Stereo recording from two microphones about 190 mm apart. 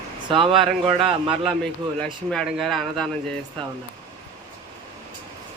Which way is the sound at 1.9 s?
5° left (ahead or behind).